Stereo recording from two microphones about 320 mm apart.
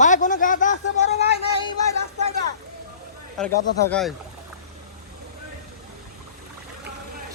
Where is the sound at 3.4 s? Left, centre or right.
Centre.